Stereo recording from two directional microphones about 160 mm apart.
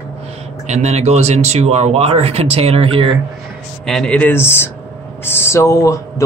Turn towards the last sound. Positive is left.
turn(degrees=20)  # may be behind; listen again after turning